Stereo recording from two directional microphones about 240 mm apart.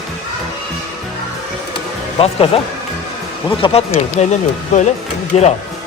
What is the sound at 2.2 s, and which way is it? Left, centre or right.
Speech, left.